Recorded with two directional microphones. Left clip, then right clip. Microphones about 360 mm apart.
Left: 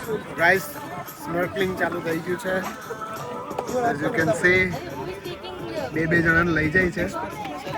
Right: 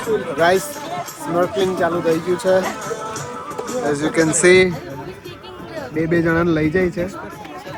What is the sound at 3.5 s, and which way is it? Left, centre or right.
Music, centre.